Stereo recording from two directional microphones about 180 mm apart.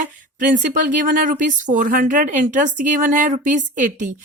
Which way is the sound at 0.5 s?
45° right (ahead or behind).